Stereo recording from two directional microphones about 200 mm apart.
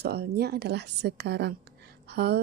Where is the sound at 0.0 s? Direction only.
55° right (ahead or behind).